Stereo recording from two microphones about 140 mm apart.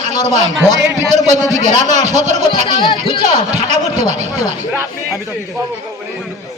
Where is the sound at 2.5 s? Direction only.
35° left (ahead or behind).